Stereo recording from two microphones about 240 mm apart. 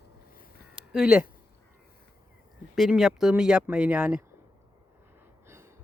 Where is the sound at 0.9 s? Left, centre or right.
Centre.